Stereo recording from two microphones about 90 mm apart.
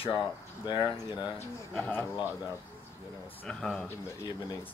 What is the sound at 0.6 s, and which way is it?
Speech, 55° left (ahead or behind).